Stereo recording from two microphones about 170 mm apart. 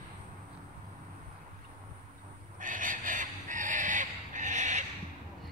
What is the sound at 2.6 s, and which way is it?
Fowl, 50° right (ahead or behind).